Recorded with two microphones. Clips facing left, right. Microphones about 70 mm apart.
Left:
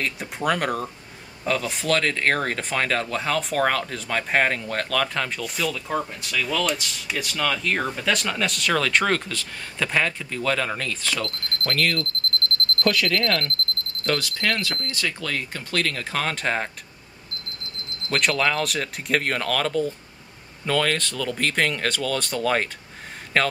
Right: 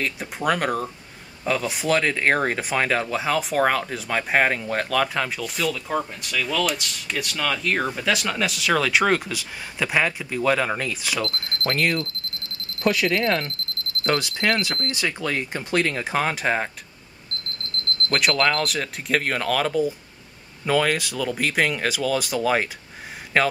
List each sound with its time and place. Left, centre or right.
0.0 s speech: centre
12.0 s alarm clock: centre
12.8 s speech: centre
17.6 s alarm clock: centre
18.1 s speech: centre